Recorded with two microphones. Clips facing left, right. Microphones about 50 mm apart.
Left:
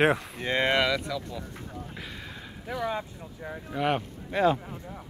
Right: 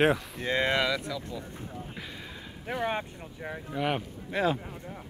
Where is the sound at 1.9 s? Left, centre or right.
Centre.